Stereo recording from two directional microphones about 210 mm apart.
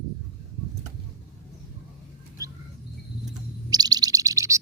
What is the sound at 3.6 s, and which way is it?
Bird, 20° right (ahead or behind).